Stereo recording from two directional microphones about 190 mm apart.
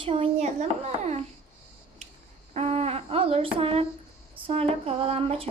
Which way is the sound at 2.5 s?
35° right (ahead or behind).